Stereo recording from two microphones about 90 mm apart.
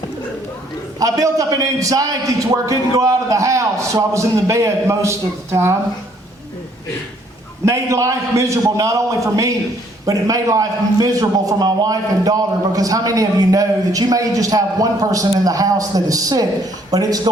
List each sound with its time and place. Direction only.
0.9 s a man's voice: 40° right (ahead or behind)
7.6 s a man's voice: 35° right (ahead or behind)